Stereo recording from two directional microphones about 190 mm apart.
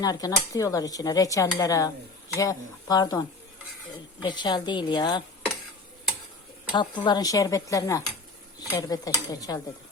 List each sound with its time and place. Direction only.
0.0 s speech: 20° left (ahead or behind)
6.7 s speech: 25° left (ahead or behind)